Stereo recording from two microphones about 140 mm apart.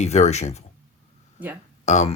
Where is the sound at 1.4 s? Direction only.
10° right (ahead or behind).